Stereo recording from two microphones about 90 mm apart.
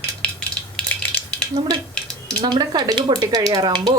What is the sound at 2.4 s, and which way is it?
Speech, 50° right (ahead or behind).